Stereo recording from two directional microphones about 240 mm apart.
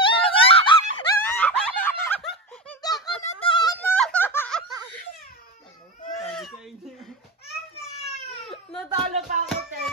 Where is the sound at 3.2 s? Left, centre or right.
Left.